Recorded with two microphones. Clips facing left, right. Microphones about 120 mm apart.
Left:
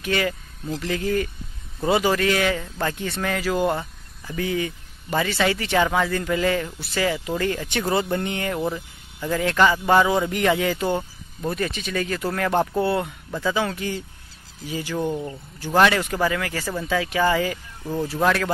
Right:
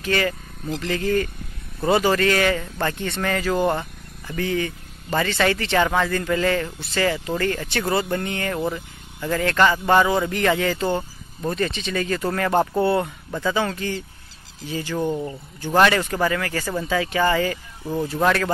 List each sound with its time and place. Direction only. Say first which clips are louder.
0.0 s speech: right 1 dB; 10° left (ahead or behind)
15.0 s speech: right 2 dB; centre (ahead or behind)